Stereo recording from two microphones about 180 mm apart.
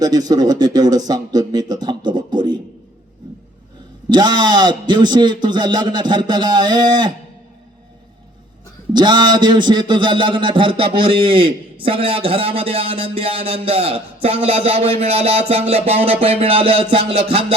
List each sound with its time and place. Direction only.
0.0 s a man's voice: 20° right (ahead or behind)
4.1 s a man's voice: 25° right (ahead or behind)
8.9 s a man's voice: 25° right (ahead or behind)